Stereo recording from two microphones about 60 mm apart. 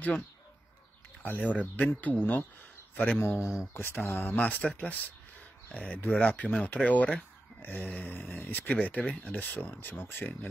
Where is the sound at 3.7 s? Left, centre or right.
Left.